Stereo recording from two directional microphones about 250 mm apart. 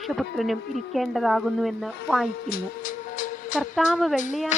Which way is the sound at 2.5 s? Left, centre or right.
Left.